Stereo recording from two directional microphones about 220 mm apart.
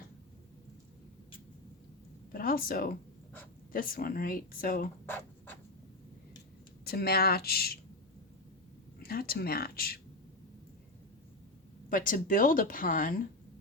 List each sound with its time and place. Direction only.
2.3 s speech: 40° left (ahead or behind)
5.0 s a sound: 10° left (ahead or behind)
6.8 s speech: 45° left (ahead or behind)
9.0 s speech: 45° left (ahead or behind)
11.9 s speech: 40° left (ahead or behind)